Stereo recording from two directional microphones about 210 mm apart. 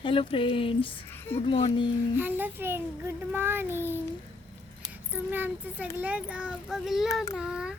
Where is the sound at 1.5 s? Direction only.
25° left (ahead or behind).